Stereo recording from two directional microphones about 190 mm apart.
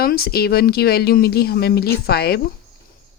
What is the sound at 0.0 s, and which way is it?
Speech, 55° left (ahead or behind).